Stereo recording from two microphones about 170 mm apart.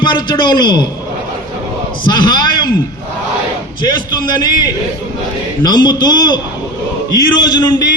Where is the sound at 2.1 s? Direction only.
25° left (ahead or behind).